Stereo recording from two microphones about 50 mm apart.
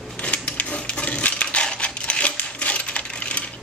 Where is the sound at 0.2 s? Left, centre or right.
Left.